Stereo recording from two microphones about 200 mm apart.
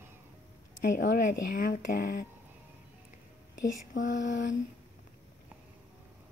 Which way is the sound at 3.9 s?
40° left (ahead or behind).